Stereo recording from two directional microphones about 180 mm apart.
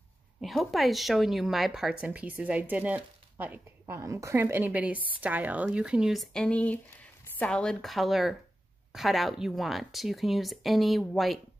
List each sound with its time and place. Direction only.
0.4 s speech: centre (ahead or behind)